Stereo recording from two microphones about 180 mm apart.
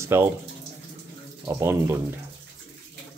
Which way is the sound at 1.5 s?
15° right (ahead or behind).